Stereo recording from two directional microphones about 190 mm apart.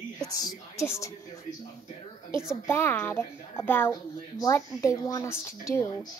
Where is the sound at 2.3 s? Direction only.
15° left (ahead or behind).